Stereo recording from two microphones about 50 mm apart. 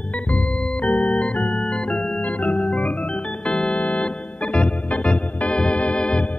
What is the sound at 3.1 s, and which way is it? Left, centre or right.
Organ, centre.